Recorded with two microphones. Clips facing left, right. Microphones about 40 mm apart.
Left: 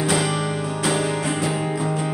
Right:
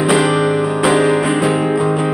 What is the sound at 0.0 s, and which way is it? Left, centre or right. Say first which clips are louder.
Music: right 8 dB; right.